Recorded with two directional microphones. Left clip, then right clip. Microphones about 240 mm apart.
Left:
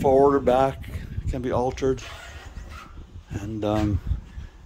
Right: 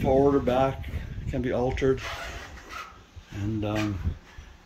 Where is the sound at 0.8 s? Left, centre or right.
Centre.